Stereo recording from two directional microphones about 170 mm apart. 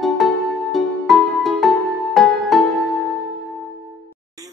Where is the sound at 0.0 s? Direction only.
Centre (ahead or behind).